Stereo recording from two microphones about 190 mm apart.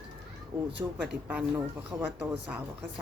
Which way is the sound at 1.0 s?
5° right (ahead or behind).